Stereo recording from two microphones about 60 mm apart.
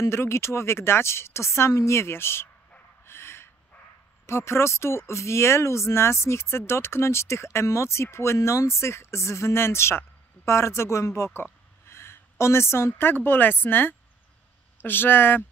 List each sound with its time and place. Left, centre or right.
0.0 s speech: left
3.1 s dog: left
4.3 s a woman's voice: left